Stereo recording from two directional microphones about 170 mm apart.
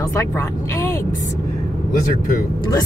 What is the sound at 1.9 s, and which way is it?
Speech, 50° left (ahead or behind).